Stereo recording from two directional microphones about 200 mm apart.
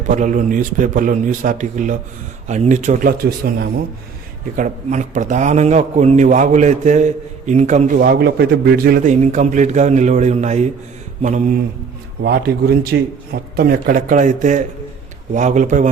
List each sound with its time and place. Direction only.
0.1 s a man's voice: 40° right (ahead or behind)
12.2 s a man's voice: 55° right (ahead or behind)